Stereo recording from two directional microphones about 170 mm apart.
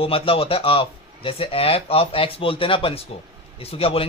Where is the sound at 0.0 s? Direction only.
35° left (ahead or behind).